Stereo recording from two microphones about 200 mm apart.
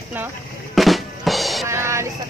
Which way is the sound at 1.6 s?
15° right (ahead or behind).